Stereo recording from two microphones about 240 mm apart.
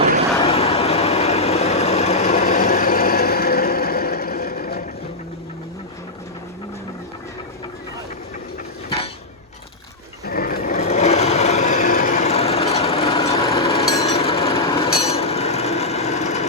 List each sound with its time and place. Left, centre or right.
0.4 s vehicle: left
10.2 s sewing machine: left
15.0 s a sound: left